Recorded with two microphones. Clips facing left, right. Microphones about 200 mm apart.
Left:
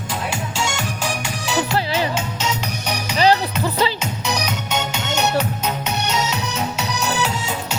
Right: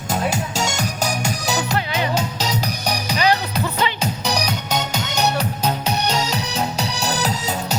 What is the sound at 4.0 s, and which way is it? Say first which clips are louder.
Music: right 2 dB; 35° right (ahead or behind).